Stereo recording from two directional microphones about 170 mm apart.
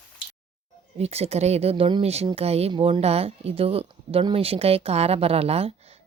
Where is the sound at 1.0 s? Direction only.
35° right (ahead or behind).